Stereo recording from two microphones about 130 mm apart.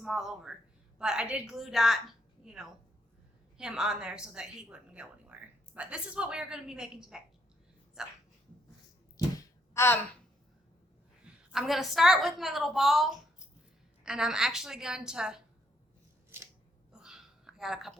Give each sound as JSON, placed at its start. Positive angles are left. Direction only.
{"t": 0.0, "sound": "a woman's voice", "side_deg": 0}
{"t": 9.7, "sound": "speech", "side_deg": 20}
{"t": 11.5, "sound": "a woman's voice", "side_deg": -5}
{"t": 16.9, "sound": "a sound", "side_deg": -5}